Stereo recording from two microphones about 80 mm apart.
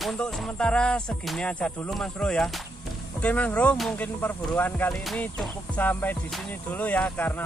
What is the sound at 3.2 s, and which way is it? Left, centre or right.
Music, centre.